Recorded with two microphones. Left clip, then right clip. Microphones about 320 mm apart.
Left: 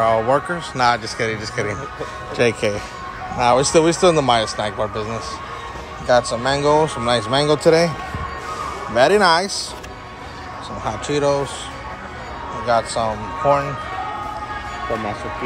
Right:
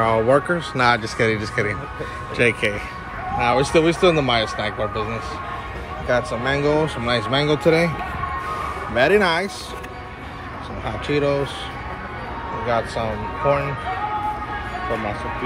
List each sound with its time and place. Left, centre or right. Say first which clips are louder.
0.0 s speech: left 1 dB; centre
6.4 s speech: left 3 dB; centre
7.4 s speech: left 4 dB; left
8.9 s speech: left 3 dB; centre
10.9 s speech: left 2 dB; centre
12.6 s speech: left 4 dB; centre